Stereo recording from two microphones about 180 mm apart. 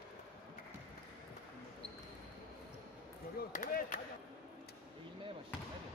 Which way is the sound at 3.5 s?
50° left (ahead or behind).